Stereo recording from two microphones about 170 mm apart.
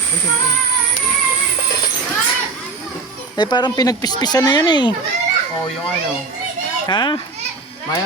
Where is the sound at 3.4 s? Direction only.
25° left (ahead or behind).